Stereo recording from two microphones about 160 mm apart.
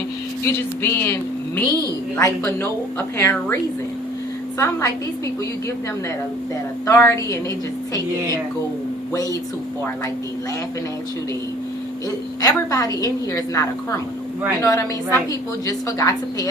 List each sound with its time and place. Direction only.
0.4 s speech: 15° left (ahead or behind)
6.8 s speech: 15° left (ahead or behind)
9.1 s a woman's voice: 20° left (ahead or behind)
12.4 s a woman's voice: 20° left (ahead or behind)